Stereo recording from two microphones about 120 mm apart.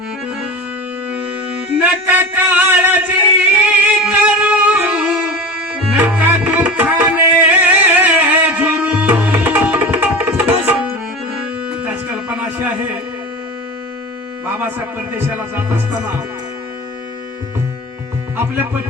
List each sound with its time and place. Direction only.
1.8 s a sound: 15° right (ahead or behind)
5.9 s tabla: 15° right (ahead or behind)
11.7 s music: 10° right (ahead or behind)
12.5 s a sound: 15° right (ahead or behind)
14.4 s speech: 15° right (ahead or behind)
18.3 s speech: 15° right (ahead or behind)